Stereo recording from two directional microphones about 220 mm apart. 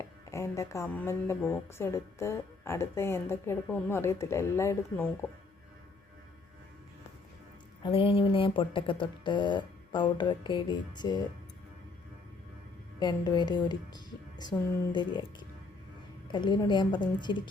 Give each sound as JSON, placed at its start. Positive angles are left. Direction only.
{"t": 0.0, "sound": "speech", "side_deg": 15}
{"t": 7.8, "sound": "speech", "side_deg": 25}
{"t": 13.0, "sound": "a woman's voice", "side_deg": 20}
{"t": 16.3, "sound": "speech", "side_deg": 20}